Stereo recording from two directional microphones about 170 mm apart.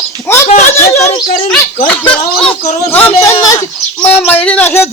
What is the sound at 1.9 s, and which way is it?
Bird, 5° left (ahead or behind).